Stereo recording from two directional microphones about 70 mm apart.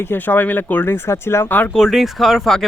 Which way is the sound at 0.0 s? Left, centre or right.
Left.